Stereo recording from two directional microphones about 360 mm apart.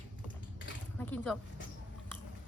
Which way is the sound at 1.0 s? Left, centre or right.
Centre.